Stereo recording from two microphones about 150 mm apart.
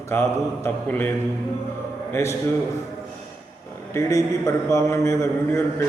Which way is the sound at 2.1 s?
15° left (ahead or behind).